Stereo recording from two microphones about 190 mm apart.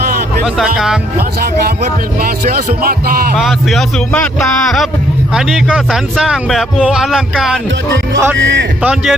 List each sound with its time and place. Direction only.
0.4 s a man's voice: centre (ahead or behind)
1.4 s music: 50° right (ahead or behind)
3.3 s a man's voice: centre (ahead or behind)
5.3 s a man's voice: centre (ahead or behind)
8.4 s a man's voice: 70° right (ahead or behind)
8.8 s a man's voice: 5° right (ahead or behind)